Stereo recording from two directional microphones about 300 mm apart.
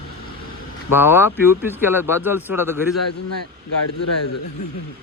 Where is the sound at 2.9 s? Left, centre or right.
Left.